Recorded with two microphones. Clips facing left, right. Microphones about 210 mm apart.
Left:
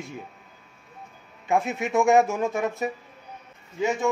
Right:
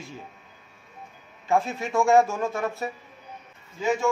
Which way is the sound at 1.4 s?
20° left (ahead or behind).